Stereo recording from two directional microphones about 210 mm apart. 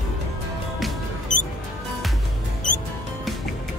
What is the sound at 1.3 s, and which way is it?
Music, 35° left (ahead or behind).